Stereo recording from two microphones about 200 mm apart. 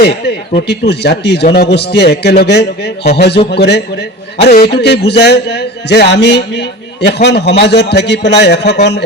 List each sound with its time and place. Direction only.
0.0 s a man's voice: 55° left (ahead or behind)